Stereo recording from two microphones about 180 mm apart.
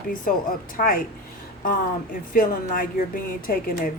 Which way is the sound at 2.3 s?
50° left (ahead or behind).